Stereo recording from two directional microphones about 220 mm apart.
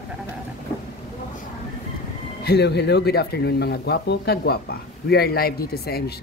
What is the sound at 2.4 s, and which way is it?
Speech, 50° left (ahead or behind).